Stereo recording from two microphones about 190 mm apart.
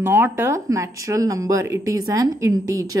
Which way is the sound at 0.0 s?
10° right (ahead or behind).